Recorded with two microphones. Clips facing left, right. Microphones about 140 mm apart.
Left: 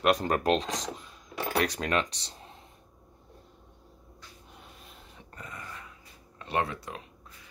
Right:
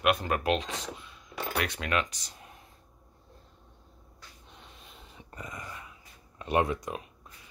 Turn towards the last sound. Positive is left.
turn(degrees=-15)  # may be behind; listen again after turning